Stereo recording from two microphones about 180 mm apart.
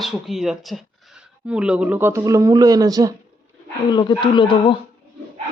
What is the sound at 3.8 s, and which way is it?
Speech, 25° left (ahead or behind).